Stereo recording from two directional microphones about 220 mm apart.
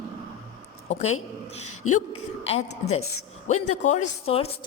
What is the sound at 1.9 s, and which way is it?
A man's voice, 25° left (ahead or behind).